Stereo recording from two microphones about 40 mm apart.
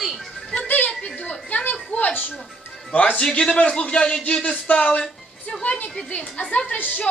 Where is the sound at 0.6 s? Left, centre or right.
Left.